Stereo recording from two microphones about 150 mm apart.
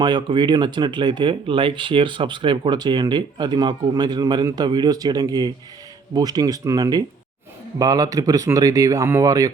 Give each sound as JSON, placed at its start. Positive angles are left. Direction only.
{"t": 0.0, "sound": "speech", "side_deg": -30}